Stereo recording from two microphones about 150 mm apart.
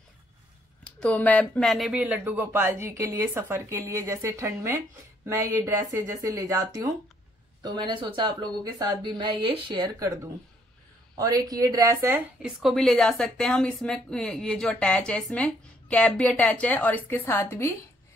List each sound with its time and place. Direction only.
1.0 s speech: 10° left (ahead or behind); by 10.1 s 25° right (ahead or behind)
11.1 s speech: 25° right (ahead or behind)
12.4 s a woman's voice: 5° right (ahead or behind); by 17.7 s 15° left (ahead or behind)